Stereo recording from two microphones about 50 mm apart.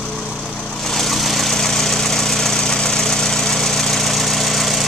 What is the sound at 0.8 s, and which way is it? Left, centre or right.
Vehicle, centre.